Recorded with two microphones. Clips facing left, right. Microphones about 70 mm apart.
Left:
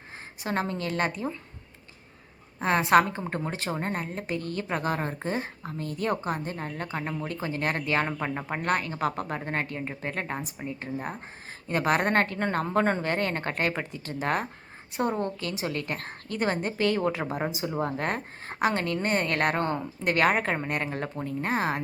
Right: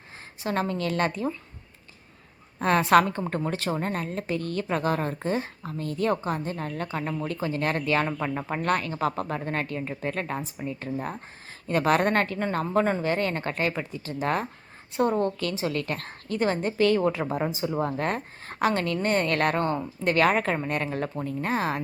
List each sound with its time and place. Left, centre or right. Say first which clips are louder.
0.4 s speech: right 2 dB; left
2.6 s a woman's voice: right 1 dB; left
14.9 s a woman's voice: right 4 dB; left